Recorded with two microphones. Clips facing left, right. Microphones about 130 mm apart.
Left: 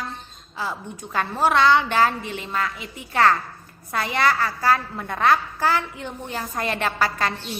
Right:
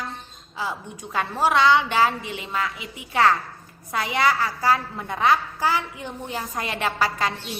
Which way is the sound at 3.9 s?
15° right (ahead or behind).